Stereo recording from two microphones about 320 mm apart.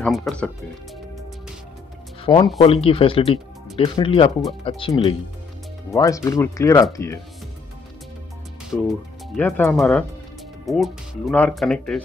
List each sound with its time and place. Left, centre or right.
0.0 s speech: centre
2.2 s speech: centre
8.6 s speech: centre